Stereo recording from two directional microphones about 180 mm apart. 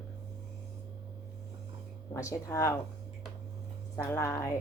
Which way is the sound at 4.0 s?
15° left (ahead or behind).